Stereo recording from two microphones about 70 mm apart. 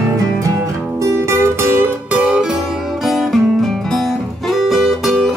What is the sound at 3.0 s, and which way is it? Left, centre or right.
Music, centre.